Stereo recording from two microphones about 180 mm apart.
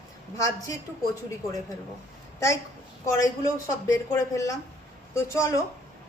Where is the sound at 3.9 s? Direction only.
20° left (ahead or behind).